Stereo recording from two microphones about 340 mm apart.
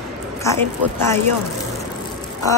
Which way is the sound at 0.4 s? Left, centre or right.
Centre.